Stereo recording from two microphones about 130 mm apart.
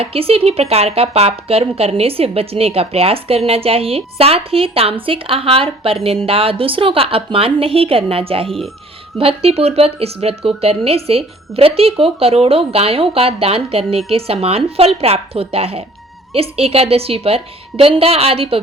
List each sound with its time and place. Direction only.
0.0 s speech: 45° right (ahead or behind)
8.4 s speech: centre (ahead or behind)
9.1 s speech: 50° right (ahead or behind)